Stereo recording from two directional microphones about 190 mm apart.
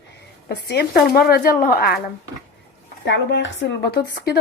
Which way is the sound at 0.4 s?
55° left (ahead or behind).